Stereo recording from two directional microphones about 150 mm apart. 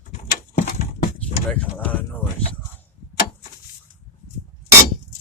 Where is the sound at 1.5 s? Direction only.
10° left (ahead or behind).